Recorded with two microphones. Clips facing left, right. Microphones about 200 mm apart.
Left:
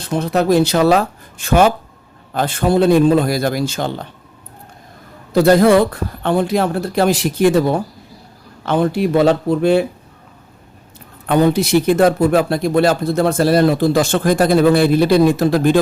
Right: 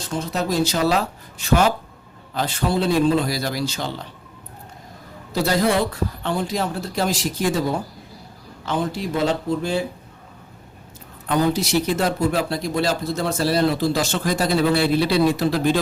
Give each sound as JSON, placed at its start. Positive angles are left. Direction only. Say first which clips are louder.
{"t": 0.0, "sound": "speech", "louder": "left 8 dB", "side_deg": 60}
{"t": 5.3, "sound": "speech", "louder": "left 9 dB", "side_deg": 55}
{"t": 11.3, "sound": "speech", "louder": "left 6 dB", "side_deg": 60}